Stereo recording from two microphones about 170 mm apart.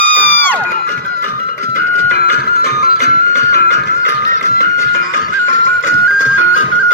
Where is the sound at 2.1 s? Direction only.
65° left (ahead or behind).